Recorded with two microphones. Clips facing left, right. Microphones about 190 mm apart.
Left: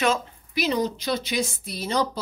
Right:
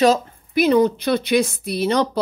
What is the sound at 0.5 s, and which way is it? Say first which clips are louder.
Speech: right 9 dB; 55° right (ahead or behind).